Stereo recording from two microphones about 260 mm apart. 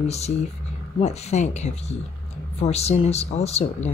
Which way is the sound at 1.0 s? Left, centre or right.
Left.